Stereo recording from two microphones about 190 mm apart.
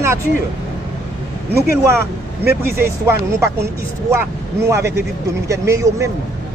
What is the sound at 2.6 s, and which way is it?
Speech, 10° right (ahead or behind).